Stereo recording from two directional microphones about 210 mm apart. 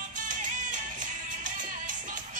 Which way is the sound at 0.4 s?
40° right (ahead or behind).